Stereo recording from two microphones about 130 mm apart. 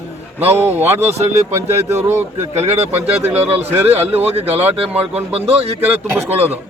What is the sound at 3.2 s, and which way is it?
Speech, 15° right (ahead or behind).